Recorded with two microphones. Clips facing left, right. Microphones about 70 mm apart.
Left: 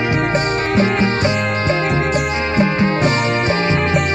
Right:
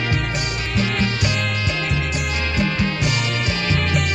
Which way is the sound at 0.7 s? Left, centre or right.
Left.